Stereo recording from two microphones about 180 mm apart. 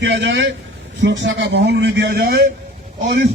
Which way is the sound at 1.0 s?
90° right.